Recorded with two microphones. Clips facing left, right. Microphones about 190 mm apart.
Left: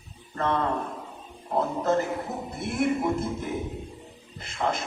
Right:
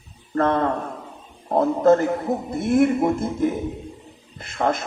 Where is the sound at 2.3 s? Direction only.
55° right (ahead or behind).